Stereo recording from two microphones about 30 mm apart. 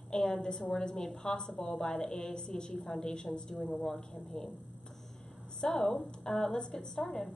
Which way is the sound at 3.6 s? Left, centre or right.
Left.